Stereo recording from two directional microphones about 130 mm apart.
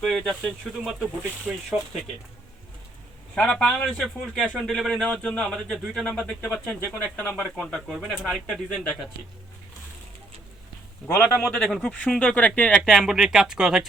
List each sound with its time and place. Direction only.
0.0 s speech: centre (ahead or behind)
3.3 s speech: 5° left (ahead or behind)
11.0 s speech: 15° left (ahead or behind)
11.4 s speech: 5° left (ahead or behind)